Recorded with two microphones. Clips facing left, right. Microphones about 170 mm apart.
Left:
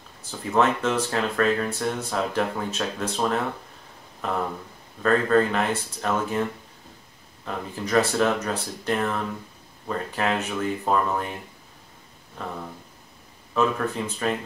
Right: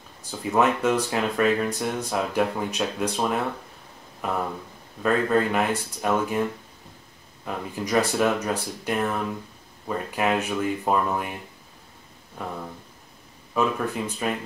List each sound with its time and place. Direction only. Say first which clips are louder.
0.3 s speech: even; 10° right (ahead or behind)
7.4 s speech: right 1 dB; 10° right (ahead or behind)
12.4 s speech: right 1 dB; 10° right (ahead or behind)
13.6 s speech: left 1 dB; 10° right (ahead or behind)